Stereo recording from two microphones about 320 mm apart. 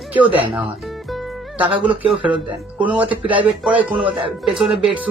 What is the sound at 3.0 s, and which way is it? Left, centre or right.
Speech, centre.